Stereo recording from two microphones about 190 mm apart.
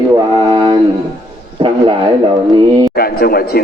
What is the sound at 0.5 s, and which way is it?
Music, 25° right (ahead or behind).